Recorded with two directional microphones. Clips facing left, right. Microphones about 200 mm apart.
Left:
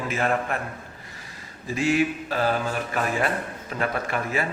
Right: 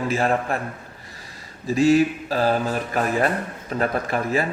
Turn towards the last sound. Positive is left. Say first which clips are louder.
# right 4 dB
turn(degrees=-35)  # may be behind; listen again after turning